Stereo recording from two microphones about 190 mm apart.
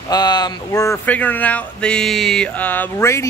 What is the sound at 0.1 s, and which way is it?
Speech, 20° left (ahead or behind).